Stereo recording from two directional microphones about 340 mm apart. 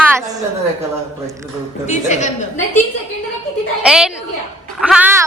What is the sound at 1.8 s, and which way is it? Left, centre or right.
Speech, left.